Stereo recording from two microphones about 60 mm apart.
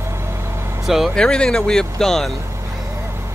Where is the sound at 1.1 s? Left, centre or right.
Centre.